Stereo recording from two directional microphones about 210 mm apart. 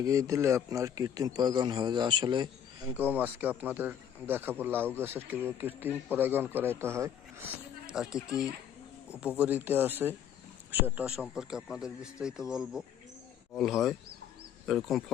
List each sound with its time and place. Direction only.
0.0 s a man's voice: 15° right (ahead or behind)
3.0 s speech: 10° right (ahead or behind)